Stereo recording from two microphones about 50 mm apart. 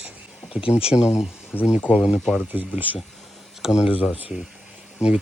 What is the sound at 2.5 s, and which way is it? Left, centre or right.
Speech, right.